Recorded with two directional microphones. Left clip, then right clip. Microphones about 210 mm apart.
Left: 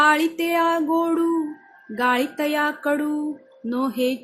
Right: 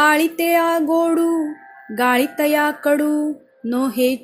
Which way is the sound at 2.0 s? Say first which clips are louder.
Right 4 dB; 20° right (ahead or behind).